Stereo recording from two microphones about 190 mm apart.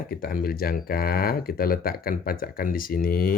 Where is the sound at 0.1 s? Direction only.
50° left (ahead or behind).